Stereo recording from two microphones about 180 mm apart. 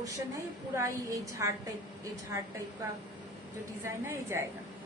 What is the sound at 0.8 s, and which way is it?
Speech, 15° right (ahead or behind).